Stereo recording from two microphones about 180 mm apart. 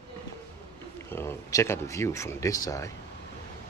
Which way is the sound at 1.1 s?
15° left (ahead or behind).